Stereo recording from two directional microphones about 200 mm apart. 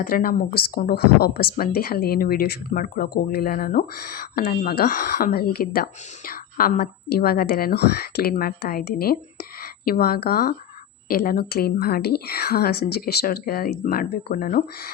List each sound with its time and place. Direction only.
0.0 s speech: 45° left (ahead or behind)